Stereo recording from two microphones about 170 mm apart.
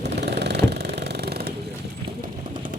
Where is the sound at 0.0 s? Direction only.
80° right.